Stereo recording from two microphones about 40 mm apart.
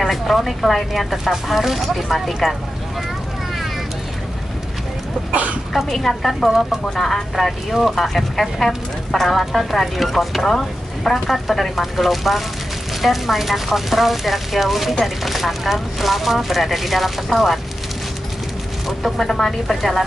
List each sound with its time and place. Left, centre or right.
0.0 s speech: centre
5.3 s speech: right
5.7 s speech: centre
6.5 s speech: centre
7.1 s speech: centre
18.9 s speech: centre